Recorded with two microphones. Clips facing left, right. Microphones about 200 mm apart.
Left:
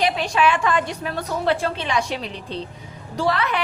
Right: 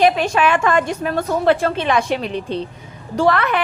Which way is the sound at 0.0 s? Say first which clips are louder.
Right 5 dB; 50° right (ahead or behind).